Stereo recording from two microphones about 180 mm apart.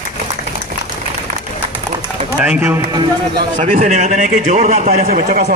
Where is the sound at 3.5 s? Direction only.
45° right (ahead or behind).